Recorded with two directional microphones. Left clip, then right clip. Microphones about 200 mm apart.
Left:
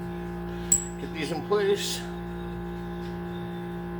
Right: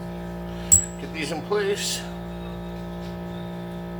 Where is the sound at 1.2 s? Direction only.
35° left (ahead or behind).